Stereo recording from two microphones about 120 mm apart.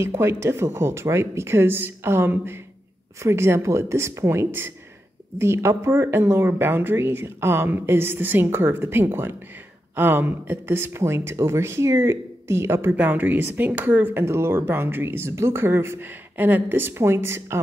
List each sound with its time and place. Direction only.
0.0 s speech: 20° right (ahead or behind)